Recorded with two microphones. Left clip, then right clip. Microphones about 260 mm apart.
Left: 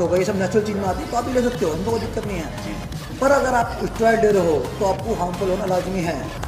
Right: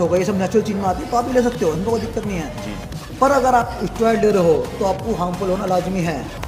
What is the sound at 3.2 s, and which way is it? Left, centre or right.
A man's voice, right.